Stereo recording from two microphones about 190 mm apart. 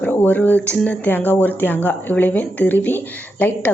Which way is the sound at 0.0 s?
10° left (ahead or behind).